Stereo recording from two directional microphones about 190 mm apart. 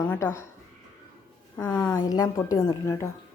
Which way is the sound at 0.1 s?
10° left (ahead or behind).